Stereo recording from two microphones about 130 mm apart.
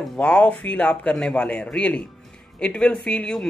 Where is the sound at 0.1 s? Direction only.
10° left (ahead or behind).